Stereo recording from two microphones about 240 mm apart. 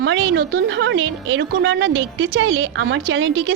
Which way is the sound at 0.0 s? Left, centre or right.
Right.